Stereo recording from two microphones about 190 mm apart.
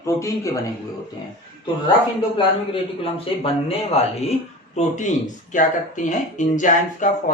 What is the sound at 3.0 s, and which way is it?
Speech, 30° left (ahead or behind).